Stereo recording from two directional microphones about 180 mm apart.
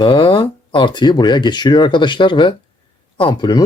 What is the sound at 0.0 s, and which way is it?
Speech, 30° left (ahead or behind).